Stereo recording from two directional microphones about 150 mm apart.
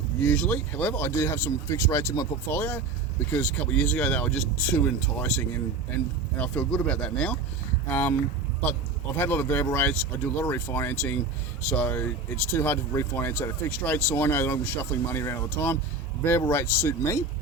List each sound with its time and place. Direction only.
0.2 s speech: 10° left (ahead or behind)
9.1 s speech: 15° left (ahead or behind)